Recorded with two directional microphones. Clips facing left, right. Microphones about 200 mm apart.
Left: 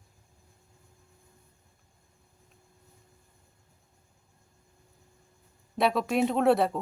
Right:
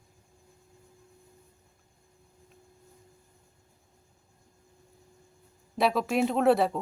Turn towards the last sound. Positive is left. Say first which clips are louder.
# even
turn(degrees=0)  # may be behind; listen again after turning